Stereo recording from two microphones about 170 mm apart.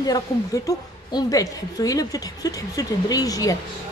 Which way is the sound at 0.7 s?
20° left (ahead or behind).